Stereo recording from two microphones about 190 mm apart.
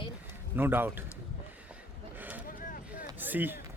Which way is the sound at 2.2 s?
10° right (ahead or behind).